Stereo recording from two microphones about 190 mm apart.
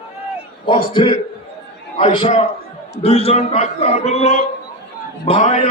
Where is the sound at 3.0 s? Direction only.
30° left (ahead or behind).